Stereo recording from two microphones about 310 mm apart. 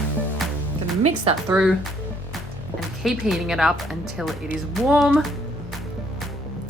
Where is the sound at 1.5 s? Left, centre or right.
Centre.